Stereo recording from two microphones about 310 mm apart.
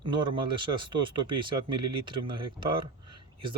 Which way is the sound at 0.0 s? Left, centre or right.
Centre.